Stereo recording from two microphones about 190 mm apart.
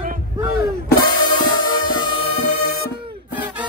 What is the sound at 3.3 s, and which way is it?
Music, 10° right (ahead or behind).